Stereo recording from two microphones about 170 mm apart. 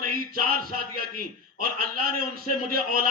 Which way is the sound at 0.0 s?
60° right (ahead or behind).